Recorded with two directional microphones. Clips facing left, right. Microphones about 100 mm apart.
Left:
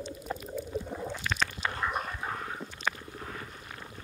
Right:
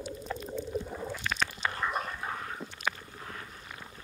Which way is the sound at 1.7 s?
Centre (ahead or behind).